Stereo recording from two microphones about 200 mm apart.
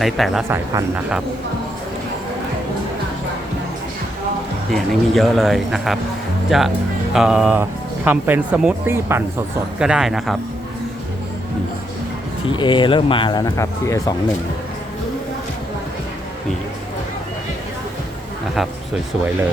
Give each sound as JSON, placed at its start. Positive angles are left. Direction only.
{"t": 0.0, "sound": "speech", "side_deg": 0}
{"t": 0.4, "sound": "speech", "side_deg": -10}
{"t": 4.7, "sound": "speech", "side_deg": 0}
{"t": 12.5, "sound": "speech", "side_deg": 25}